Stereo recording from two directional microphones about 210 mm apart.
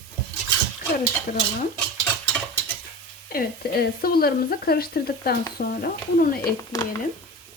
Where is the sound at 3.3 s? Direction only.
45° left (ahead or behind).